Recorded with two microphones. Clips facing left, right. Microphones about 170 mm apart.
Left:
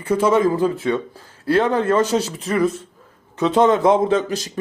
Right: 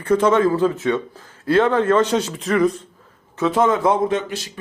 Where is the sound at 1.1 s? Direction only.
35° left (ahead or behind).